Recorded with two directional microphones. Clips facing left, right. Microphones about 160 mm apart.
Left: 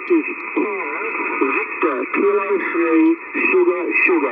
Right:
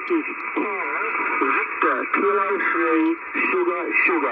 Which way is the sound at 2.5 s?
35° left (ahead or behind).